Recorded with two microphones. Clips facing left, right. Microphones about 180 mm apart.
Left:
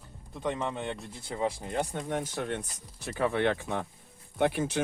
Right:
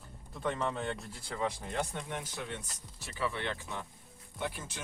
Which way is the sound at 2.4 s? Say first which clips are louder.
Left 8 dB; 60° left (ahead or behind).